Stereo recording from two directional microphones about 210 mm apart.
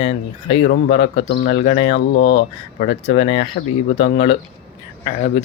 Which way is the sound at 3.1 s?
25° left (ahead or behind).